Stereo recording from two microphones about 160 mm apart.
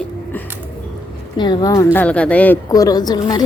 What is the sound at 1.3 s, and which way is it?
Speech, 30° left (ahead or behind).